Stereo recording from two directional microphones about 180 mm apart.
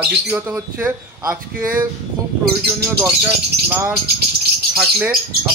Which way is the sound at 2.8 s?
10° right (ahead or behind).